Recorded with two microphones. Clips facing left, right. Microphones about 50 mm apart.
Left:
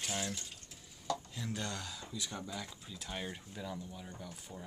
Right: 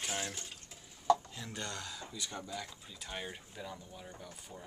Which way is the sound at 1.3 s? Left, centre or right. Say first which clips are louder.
Left 2 dB; centre.